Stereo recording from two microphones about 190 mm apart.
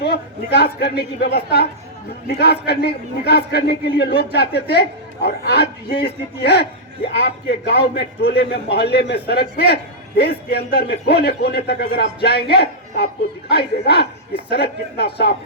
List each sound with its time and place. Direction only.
0.0 s a man's voice: 55° left (ahead or behind)